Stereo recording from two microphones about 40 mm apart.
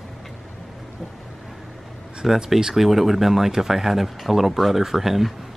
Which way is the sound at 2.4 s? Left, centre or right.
Centre.